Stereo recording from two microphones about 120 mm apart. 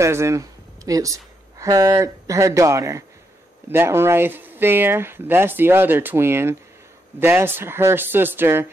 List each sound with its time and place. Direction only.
0.0 s speech: 25° right (ahead or behind)